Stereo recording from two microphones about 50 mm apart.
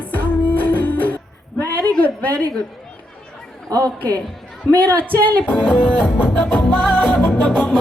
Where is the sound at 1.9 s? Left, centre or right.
Left.